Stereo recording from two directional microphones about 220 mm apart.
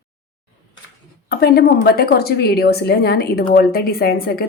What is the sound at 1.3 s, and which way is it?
A woman's voice, 45° left (ahead or behind).